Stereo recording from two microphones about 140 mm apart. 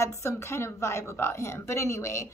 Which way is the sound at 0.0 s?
20° left (ahead or behind).